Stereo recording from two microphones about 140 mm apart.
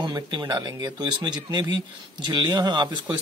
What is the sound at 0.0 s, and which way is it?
Speech, 30° right (ahead or behind).